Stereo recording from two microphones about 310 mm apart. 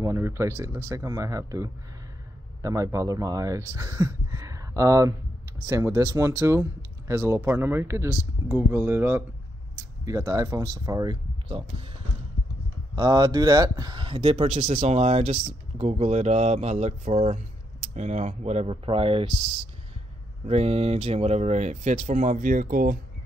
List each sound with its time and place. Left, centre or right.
0.0 s speech: centre
12.9 s speech: centre
20.4 s speech: centre